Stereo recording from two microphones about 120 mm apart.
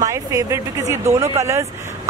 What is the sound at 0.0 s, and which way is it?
Speech, 25° right (ahead or behind).